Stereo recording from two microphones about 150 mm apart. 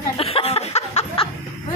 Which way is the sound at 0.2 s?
40° left (ahead or behind).